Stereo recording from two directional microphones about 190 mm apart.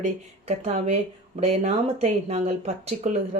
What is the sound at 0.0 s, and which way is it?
A woman's voice, 35° right (ahead or behind).